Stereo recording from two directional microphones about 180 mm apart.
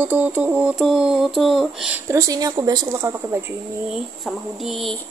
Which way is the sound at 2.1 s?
20° right (ahead or behind).